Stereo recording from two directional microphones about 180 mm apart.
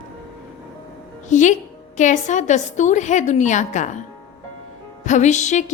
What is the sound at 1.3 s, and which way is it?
A woman's voice, 40° left (ahead or behind).